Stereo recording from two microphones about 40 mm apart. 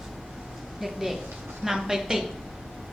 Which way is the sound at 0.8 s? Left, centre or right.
Centre.